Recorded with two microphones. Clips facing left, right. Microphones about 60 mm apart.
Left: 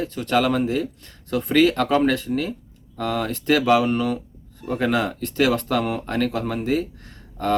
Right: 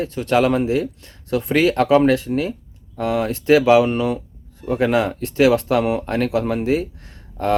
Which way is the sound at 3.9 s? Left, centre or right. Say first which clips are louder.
Right 2 dB; right.